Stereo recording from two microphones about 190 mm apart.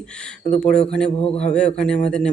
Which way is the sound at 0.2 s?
5° left (ahead or behind).